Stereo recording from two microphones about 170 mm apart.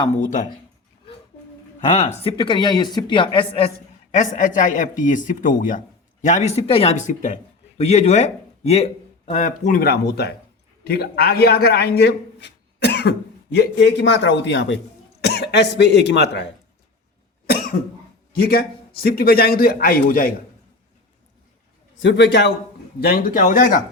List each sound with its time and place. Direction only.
0.2 s a man's voice: 45° left (ahead or behind)
1.9 s speech: 40° left (ahead or behind)
4.1 s a man's voice: 45° left (ahead or behind); by 14.8 s 90° left
15.2 s speech: 75° left (ahead or behind)
17.4 s cough: 65° left (ahead or behind)
18.3 s a man's voice: 65° left (ahead or behind)
21.9 s a man's voice: 90° left
23.0 s a man's voice: 65° left (ahead or behind)